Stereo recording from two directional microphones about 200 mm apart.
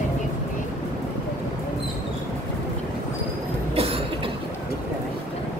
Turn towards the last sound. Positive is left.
turn(degrees=-30)  # may be behind; listen again after turning